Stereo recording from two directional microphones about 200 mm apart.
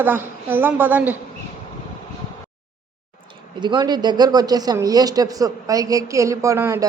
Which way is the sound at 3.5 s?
20° right (ahead or behind).